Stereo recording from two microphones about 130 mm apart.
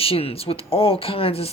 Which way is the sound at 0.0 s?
50° left (ahead or behind).